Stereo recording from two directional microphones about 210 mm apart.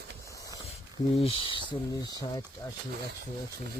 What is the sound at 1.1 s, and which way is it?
Speech, 30° left (ahead or behind).